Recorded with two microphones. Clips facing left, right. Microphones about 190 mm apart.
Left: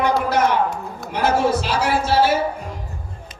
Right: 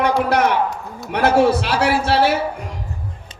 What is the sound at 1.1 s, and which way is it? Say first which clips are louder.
A man's voice: right 4 dB; 65° right (ahead or behind).